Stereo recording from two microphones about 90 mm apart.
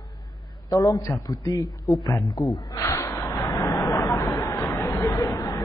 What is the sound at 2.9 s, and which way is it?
Vehicle, 30° left (ahead or behind).